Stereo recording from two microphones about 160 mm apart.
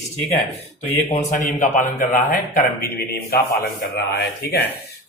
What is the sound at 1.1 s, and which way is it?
Speech, 50° left (ahead or behind).